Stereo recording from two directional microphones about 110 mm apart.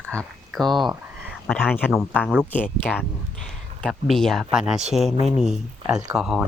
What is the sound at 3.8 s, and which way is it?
Speech, 5° left (ahead or behind).